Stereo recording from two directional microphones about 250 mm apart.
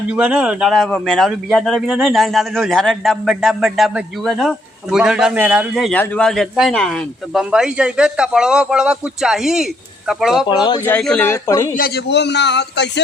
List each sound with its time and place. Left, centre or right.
0.1 s a man's voice: centre
10.5 s speech: centre
10.8 s speech: centre
11.7 s a man's voice: left